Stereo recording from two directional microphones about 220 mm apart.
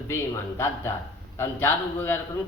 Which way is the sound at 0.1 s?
10° left (ahead or behind).